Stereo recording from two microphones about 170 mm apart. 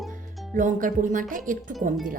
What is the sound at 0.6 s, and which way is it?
Speech, 50° right (ahead or behind).